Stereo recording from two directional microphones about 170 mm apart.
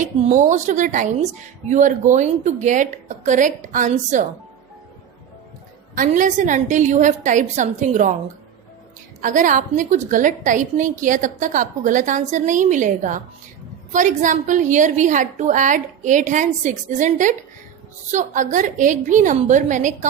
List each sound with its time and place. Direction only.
0.0 s speech: 45° right (ahead or behind)
5.9 s speech: 50° right (ahead or behind)
9.2 s speech: 50° right (ahead or behind)